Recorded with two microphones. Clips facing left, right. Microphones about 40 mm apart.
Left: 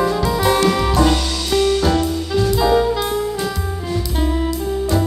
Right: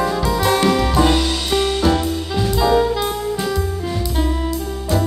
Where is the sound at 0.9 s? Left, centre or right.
Centre.